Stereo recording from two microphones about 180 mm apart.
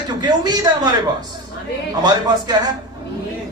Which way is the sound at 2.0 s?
20° right (ahead or behind).